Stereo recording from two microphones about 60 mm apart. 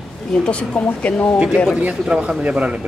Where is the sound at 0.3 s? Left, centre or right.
Centre.